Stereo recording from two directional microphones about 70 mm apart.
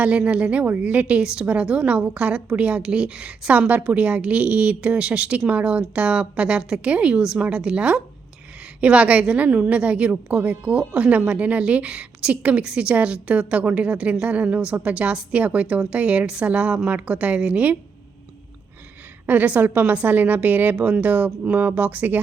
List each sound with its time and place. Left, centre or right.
0.0 s a woman's voice: centre
19.2 s a woman's voice: right